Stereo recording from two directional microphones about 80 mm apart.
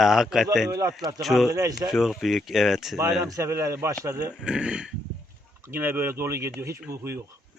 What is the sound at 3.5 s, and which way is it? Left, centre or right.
Speech, right.